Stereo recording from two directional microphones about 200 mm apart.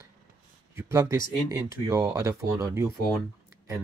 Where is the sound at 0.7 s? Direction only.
15° right (ahead or behind).